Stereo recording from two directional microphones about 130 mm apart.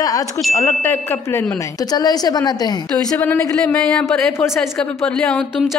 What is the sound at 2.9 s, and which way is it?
Speech, 15° left (ahead or behind).